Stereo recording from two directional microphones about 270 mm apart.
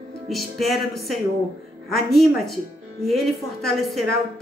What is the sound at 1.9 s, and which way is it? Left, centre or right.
A woman's voice, centre.